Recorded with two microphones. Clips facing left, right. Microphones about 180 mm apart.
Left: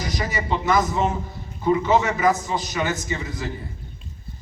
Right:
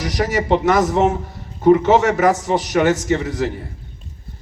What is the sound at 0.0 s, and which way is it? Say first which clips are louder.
A man's voice: right 7 dB; 80° right.